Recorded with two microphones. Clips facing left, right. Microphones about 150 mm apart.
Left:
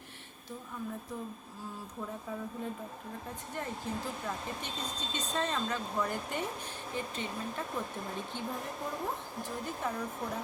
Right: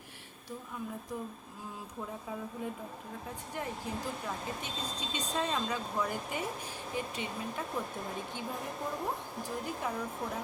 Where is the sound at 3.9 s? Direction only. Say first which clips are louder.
Even; 15° right (ahead or behind).